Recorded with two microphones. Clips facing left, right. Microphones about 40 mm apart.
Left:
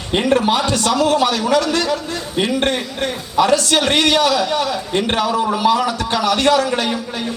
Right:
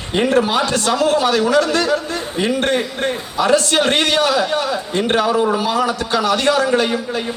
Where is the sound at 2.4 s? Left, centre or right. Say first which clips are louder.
Even; left.